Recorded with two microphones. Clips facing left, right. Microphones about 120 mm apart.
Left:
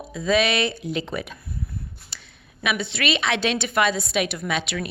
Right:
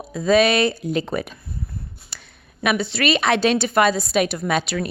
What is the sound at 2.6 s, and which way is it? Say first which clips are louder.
A woman's voice: right 5 dB; 40° right (ahead or behind).